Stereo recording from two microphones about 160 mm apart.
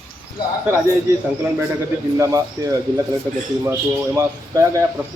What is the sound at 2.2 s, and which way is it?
Speech, 20° right (ahead or behind).